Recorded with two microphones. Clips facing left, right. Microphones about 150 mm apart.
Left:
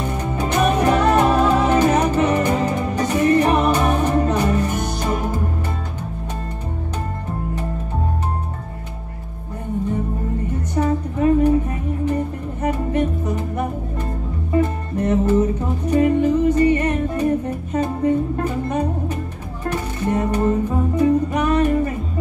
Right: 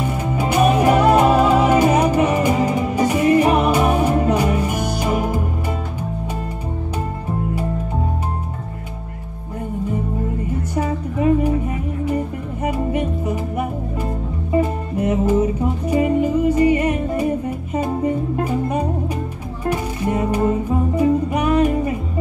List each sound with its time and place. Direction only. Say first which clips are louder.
0.2 s music: right 3 dB; 10° right (ahead or behind)
10.7 s music: left 5 dB; 10° right (ahead or behind)
12.6 s music: left 1 dB; 10° right (ahead or behind)